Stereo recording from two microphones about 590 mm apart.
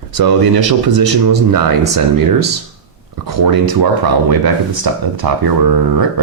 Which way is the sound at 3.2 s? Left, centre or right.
Right.